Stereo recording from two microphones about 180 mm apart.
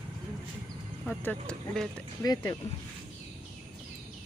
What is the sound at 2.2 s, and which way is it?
Speech, 20° left (ahead or behind).